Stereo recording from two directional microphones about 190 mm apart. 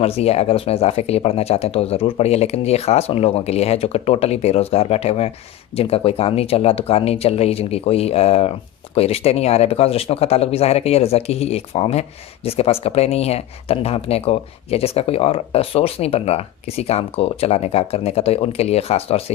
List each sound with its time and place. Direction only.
0.0 s speech: 30° left (ahead or behind)